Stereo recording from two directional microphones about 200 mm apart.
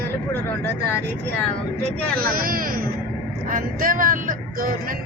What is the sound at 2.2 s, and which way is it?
Speech, 45° right (ahead or behind).